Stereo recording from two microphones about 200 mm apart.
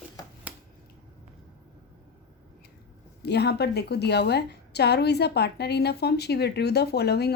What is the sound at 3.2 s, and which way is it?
A woman's voice, 55° left (ahead or behind).